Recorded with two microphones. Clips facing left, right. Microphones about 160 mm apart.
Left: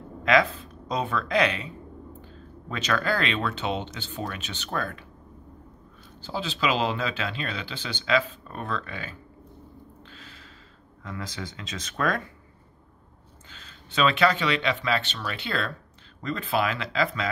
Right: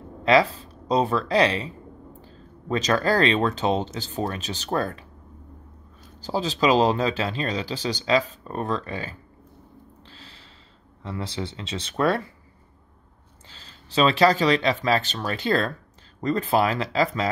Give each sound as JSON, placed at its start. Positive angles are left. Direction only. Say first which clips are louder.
{"t": 0.2, "sound": "speech", "louder": "right 3 dB", "side_deg": -30}
{"t": 6.2, "sound": "speech", "louder": "right 6 dB", "side_deg": -40}
{"t": 10.0, "sound": "snort", "louder": "even", "side_deg": -30}
{"t": 11.1, "sound": "speech", "louder": "right 5 dB", "side_deg": -30}
{"t": 13.5, "sound": "speech", "louder": "even", "side_deg": -35}